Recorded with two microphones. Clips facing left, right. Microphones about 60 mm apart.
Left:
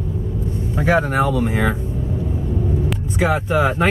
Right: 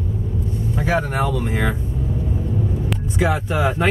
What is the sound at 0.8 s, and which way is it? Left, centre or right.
Speech, centre.